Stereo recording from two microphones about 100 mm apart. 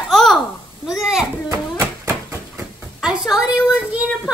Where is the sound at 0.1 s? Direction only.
5° left (ahead or behind).